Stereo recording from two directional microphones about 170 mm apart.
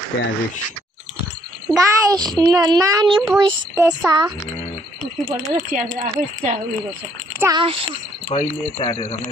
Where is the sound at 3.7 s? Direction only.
10° right (ahead or behind).